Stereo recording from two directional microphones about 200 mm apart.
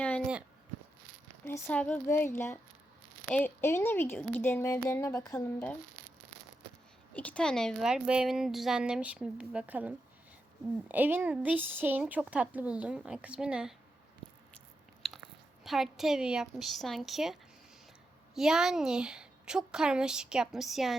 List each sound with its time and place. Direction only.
1.5 s a woman's voice: 10° left (ahead or behind)
7.1 s a woman's voice: 5° left (ahead or behind)
15.6 s a woman's voice: centre (ahead or behind)
18.3 s a woman's voice: centre (ahead or behind)